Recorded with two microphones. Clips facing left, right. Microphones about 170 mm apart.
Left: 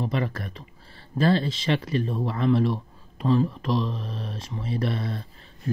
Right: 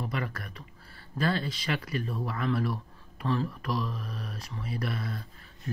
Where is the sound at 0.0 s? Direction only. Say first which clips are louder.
Left 7 dB; 25° left (ahead or behind).